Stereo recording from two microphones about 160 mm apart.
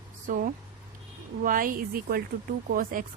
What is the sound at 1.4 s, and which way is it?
A woman's voice, 60° right (ahead or behind).